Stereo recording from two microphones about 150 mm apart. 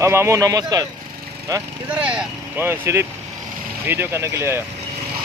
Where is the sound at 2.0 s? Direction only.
10° right (ahead or behind).